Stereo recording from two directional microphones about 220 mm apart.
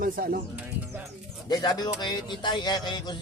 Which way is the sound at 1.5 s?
15° left (ahead or behind).